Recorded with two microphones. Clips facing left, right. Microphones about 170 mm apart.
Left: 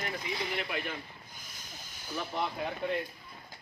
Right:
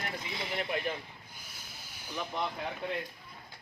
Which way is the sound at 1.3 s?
10° right (ahead or behind).